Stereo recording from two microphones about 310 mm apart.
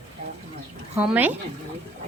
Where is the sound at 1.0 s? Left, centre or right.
Centre.